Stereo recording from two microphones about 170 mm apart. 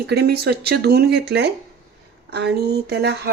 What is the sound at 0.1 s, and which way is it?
Speech, 70° right (ahead or behind).